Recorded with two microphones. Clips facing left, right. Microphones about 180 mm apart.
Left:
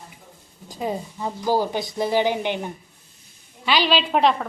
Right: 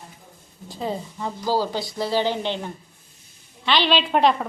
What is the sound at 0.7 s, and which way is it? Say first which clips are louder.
Speech: left 1 dB; 15° left (ahead or behind).